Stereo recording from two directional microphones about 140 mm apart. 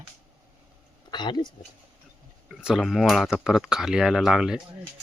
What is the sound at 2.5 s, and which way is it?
Speech, 5° right (ahead or behind).